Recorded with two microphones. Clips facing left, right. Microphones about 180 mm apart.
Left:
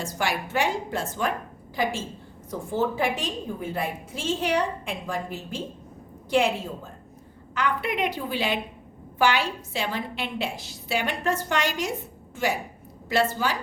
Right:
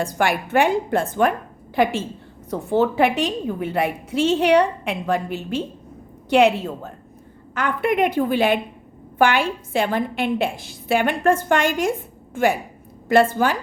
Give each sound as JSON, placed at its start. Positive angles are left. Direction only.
{"t": 0.0, "sound": "a woman's voice", "side_deg": -55}
{"t": 7.5, "sound": "a woman's voice", "side_deg": -50}